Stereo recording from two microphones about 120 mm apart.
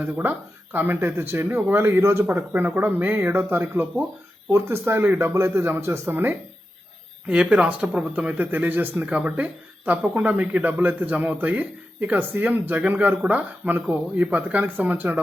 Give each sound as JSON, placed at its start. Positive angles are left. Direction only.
{"t": 0.0, "sound": "speech", "side_deg": -15}